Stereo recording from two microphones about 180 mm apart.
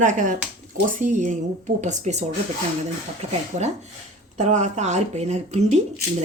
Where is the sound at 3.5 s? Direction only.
40° right (ahead or behind).